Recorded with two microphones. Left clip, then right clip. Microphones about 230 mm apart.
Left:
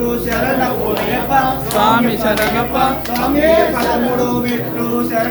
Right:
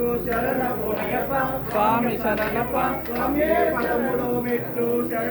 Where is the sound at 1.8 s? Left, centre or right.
Left.